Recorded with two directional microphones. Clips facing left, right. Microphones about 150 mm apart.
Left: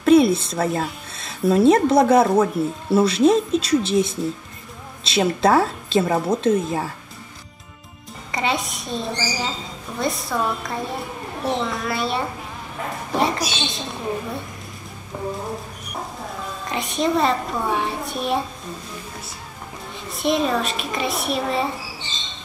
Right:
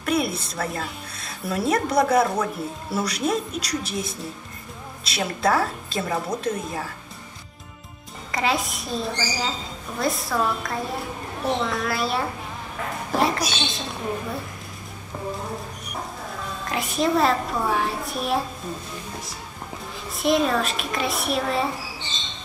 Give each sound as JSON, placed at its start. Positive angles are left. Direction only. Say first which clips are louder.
{"t": 0.0, "sound": "a woman's voice", "louder": "left 10 dB", "side_deg": 25}
{"t": 8.3, "sound": "a woman's voice", "louder": "even", "side_deg": 0}
{"t": 15.1, "sound": "speech", "louder": "left 3 dB", "side_deg": 15}
{"t": 16.6, "sound": "a woman's voice", "louder": "left 1 dB", "side_deg": 0}
{"t": 20.1, "sound": "a woman's voice", "louder": "even", "side_deg": 0}